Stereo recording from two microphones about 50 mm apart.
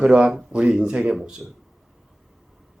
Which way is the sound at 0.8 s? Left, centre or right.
Centre.